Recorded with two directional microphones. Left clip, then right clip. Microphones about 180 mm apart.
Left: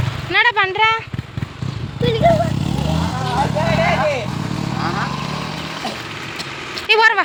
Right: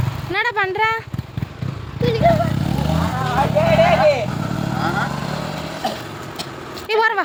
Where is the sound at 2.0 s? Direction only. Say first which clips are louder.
Left 1 dB; 30° left (ahead or behind).